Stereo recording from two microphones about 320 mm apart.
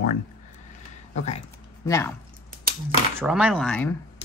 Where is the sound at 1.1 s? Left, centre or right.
Centre.